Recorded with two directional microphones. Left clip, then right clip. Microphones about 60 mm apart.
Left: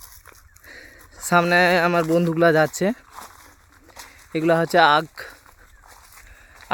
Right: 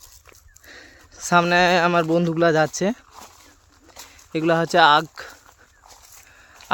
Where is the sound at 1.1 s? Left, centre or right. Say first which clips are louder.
Even; centre.